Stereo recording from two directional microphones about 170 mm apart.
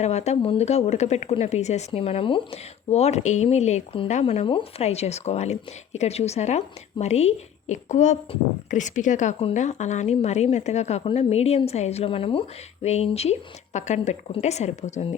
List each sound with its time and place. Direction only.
0.0 s a woman's voice: 40° left (ahead or behind)